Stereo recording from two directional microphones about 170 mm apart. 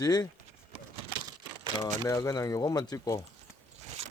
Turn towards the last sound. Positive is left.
turn(degrees=20)  # may be behind; listen again after turning